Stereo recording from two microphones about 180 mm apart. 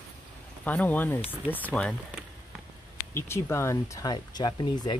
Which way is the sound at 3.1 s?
15° left (ahead or behind).